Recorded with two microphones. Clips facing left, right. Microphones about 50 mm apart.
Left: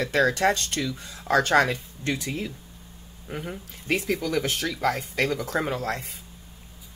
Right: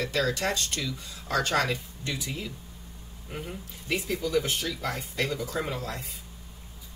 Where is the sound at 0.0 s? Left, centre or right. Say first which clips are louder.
Left 6 dB; left.